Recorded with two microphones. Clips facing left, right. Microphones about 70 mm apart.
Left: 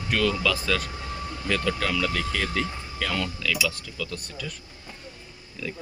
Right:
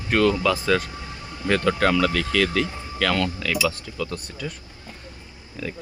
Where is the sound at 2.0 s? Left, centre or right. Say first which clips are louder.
Right 6 dB; right.